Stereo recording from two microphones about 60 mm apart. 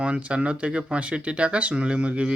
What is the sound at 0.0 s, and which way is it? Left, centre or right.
A man's voice, right.